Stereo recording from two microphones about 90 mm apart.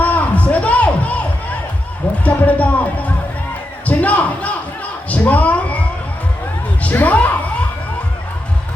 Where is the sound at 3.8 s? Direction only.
15° left (ahead or behind).